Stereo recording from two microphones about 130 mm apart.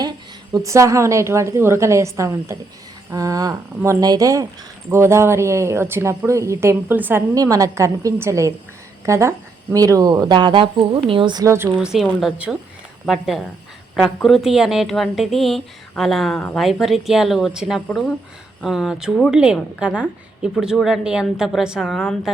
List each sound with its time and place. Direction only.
0.5 s speech: 25° right (ahead or behind)
11.4 s speech: 20° right (ahead or behind)
11.8 s speech: 5° right (ahead or behind)